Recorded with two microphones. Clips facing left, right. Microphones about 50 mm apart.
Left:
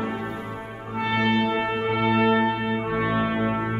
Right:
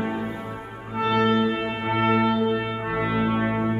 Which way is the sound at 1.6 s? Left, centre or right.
Centre.